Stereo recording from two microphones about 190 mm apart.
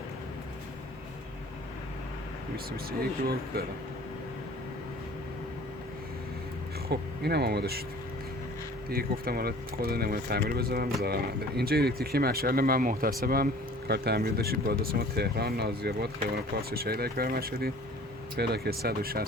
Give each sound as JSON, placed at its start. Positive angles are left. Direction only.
{"t": 6.8, "sound": "speech", "side_deg": -60}
{"t": 8.9, "sound": "speech", "side_deg": -50}